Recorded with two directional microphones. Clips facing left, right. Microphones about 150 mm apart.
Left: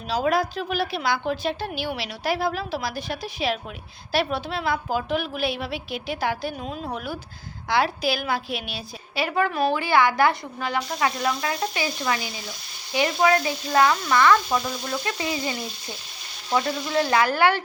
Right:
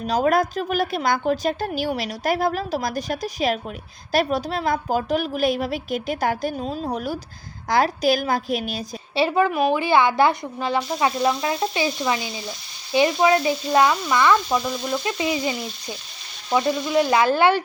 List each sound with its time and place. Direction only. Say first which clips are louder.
0.1 s a woman's voice: right 3 dB; 50° right (ahead or behind)
9.1 s speech: right 4 dB; 25° right (ahead or behind)
14.5 s speech: right 3 dB; 5° right (ahead or behind)
15.0 s speech: right 4 dB; 20° right (ahead or behind)
16.5 s frying: right 3 dB; 15° right (ahead or behind)
16.9 s speech: right 3 dB; 15° right (ahead or behind)